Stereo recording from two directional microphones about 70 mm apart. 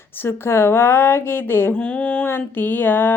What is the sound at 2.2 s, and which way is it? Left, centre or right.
Speech, left.